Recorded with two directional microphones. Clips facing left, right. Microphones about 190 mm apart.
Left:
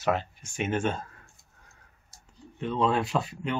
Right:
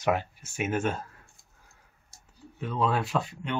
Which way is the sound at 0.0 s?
10° right (ahead or behind).